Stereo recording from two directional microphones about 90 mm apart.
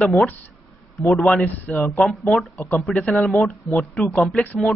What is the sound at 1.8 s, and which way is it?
A man's voice, centre (ahead or behind).